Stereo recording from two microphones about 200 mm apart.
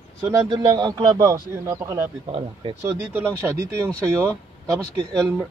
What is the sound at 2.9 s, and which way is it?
Speech, 10° right (ahead or behind).